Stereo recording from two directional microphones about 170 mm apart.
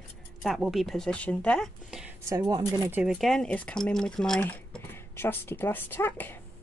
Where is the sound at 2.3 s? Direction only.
20° right (ahead or behind).